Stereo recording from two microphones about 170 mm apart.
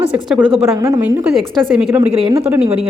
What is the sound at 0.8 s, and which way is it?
Speech, 20° right (ahead or behind).